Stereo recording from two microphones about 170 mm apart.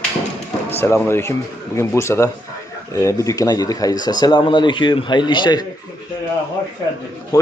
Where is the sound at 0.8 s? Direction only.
15° left (ahead or behind).